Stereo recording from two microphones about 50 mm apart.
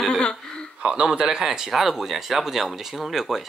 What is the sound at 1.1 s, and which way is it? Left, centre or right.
Speech, centre.